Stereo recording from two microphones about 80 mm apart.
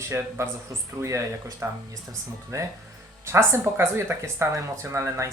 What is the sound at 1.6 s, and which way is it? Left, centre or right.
Speech, right.